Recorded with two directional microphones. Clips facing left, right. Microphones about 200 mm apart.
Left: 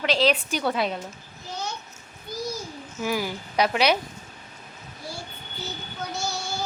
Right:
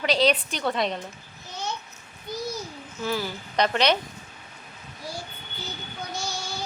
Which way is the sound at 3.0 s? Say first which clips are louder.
Left 2 dB; 10° left (ahead or behind).